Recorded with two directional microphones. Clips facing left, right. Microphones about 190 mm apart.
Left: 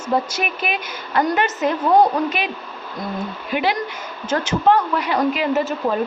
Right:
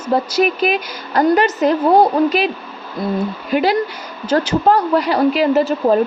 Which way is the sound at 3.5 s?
40° right (ahead or behind).